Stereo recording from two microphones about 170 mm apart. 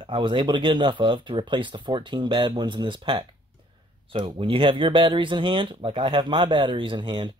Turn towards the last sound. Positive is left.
turn(degrees=-30)  # may be behind; listen again after turning